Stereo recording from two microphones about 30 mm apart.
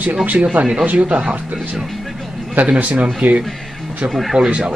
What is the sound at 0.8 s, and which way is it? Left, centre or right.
Speech, right.